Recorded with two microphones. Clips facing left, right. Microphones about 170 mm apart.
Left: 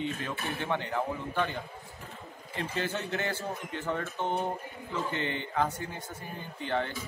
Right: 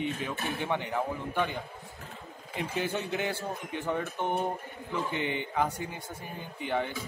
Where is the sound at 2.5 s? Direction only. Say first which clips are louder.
Right 1 dB; 15° right (ahead or behind).